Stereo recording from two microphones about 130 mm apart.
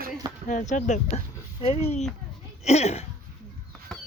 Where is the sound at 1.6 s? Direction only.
50° left (ahead or behind).